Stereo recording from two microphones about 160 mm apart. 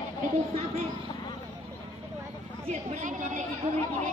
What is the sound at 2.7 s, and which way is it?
Speech, 50° right (ahead or behind).